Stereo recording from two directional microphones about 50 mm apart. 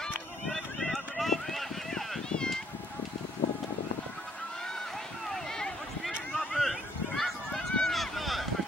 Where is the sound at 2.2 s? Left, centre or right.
Centre.